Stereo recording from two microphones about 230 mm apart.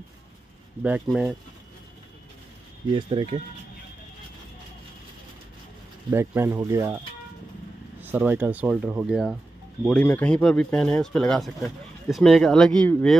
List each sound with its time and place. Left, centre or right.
0.8 s speech: centre
3.0 s speech: right
6.0 s speech: centre
8.0 s speech: centre